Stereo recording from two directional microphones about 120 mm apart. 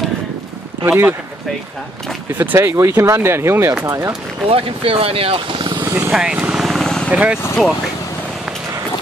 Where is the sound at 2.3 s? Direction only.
15° right (ahead or behind).